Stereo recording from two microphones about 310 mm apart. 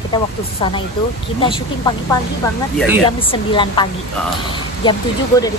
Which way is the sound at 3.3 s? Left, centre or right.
Centre.